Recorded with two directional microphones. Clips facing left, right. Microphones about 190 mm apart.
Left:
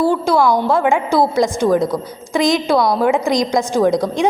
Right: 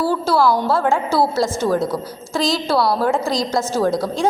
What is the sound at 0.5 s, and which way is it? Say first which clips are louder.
A woman's voice: left 3 dB; 15° left (ahead or behind).